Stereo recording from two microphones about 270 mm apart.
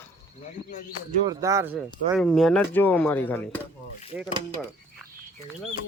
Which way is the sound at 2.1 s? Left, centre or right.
Centre.